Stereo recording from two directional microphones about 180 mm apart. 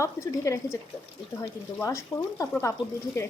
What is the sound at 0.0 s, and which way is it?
A woman's voice, 15° left (ahead or behind).